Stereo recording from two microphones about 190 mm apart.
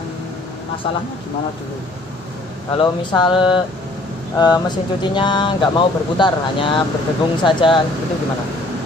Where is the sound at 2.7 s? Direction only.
25° left (ahead or behind).